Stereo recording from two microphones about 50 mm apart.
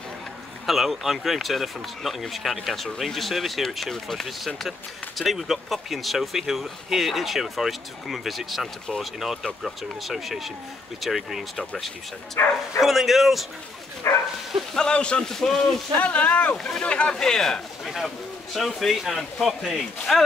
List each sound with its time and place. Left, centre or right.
0.7 s speech: centre
11.5 s speech: centre
12.4 s speech: left
12.8 s speech: centre
14.0 s bow-wow: left
14.7 s speech: centre
15.2 s speech: centre
16.0 s speech: left
16.5 s speech: centre
17.2 s speech: centre